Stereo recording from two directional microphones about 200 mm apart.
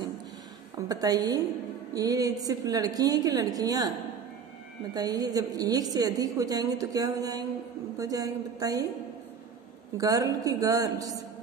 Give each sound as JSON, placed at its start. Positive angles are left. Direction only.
{"t": 0.8, "sound": "a woman's voice", "side_deg": -20}
{"t": 4.9, "sound": "a woman's voice", "side_deg": -20}
{"t": 9.9, "sound": "a woman's voice", "side_deg": -15}